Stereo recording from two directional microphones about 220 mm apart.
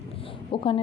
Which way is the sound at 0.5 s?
25° left (ahead or behind).